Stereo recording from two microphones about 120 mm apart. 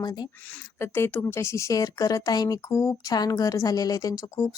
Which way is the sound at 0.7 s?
20° left (ahead or behind).